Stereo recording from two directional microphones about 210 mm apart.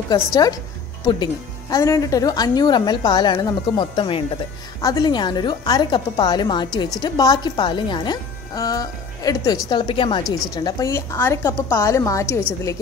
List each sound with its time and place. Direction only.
0.1 s a woman's voice: 15° left (ahead or behind)